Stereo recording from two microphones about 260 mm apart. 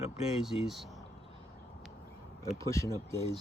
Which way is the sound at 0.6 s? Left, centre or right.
Centre.